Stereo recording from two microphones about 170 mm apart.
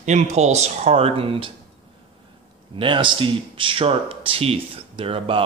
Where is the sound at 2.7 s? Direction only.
30° right (ahead or behind).